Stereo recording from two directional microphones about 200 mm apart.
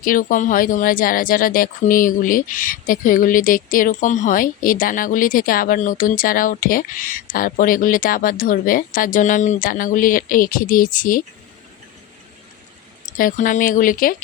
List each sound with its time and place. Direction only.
0.0 s speech: 45° left (ahead or behind)
13.1 s speech: 40° left (ahead or behind)